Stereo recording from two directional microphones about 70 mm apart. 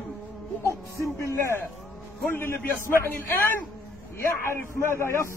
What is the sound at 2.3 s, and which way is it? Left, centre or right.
A man's voice, left.